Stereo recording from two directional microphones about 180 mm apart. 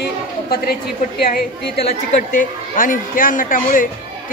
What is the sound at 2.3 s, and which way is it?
Speech, 50° left (ahead or behind).